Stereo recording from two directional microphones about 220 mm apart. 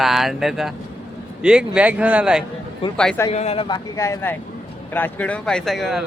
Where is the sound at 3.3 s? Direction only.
30° left (ahead or behind).